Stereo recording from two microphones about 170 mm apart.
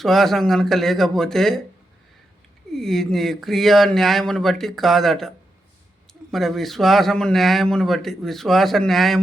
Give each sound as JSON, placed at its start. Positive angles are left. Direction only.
{"t": 0.0, "sound": "a man's voice", "side_deg": 0}
{"t": 2.7, "sound": "a man's voice", "side_deg": 0}
{"t": 6.3, "sound": "a man's voice", "side_deg": 0}